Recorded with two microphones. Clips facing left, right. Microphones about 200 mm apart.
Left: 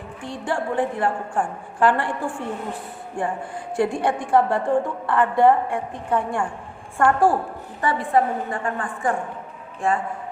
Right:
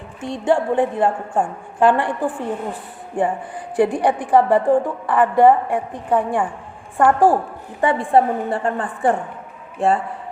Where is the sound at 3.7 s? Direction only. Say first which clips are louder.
Right 4 dB; 15° right (ahead or behind).